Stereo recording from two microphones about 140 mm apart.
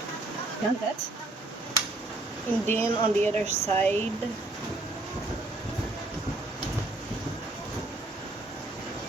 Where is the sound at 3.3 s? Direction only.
50° right (ahead or behind).